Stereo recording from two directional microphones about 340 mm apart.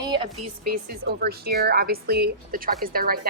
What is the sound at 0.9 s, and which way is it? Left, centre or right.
Speech, right.